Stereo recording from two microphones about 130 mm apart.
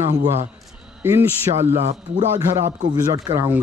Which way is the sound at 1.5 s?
40° right (ahead or behind).